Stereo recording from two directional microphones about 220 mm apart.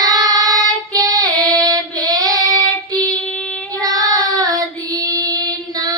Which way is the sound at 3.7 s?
15° right (ahead or behind).